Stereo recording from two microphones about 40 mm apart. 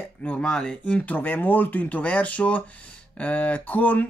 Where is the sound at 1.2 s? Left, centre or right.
Left.